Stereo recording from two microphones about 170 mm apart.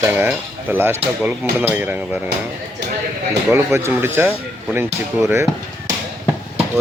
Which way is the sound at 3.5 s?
15° right (ahead or behind).